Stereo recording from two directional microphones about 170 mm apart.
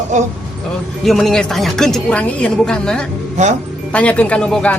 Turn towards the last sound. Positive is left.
turn(degrees=5)  # may be behind; listen again after turning